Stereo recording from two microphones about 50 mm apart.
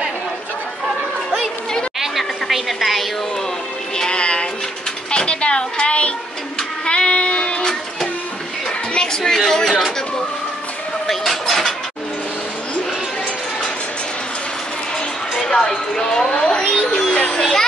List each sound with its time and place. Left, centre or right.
2.0 s a sound: centre
3.9 s music: centre
5.1 s speech: centre
6.9 s child singing: left
8.9 s a woman's voice: centre
11.1 s a sound: centre
15.3 s a child's voice: centre
17.4 s a child's voice: centre